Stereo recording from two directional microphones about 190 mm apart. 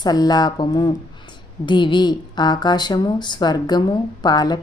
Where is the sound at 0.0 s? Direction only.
20° left (ahead or behind).